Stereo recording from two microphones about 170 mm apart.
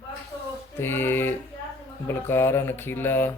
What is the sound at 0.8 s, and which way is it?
Speech, 15° left (ahead or behind).